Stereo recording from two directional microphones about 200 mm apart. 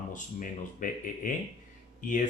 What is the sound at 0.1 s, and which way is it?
Speech, 40° left (ahead or behind).